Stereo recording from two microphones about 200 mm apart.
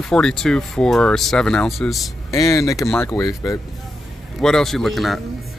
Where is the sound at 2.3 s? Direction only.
15° left (ahead or behind).